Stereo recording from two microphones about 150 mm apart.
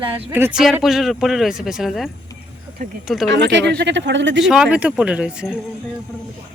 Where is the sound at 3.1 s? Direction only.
Centre (ahead or behind).